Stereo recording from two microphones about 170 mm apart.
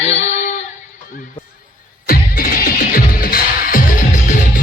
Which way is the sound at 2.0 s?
60° left (ahead or behind).